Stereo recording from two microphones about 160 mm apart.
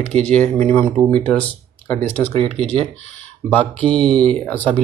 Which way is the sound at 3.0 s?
45° left (ahead or behind).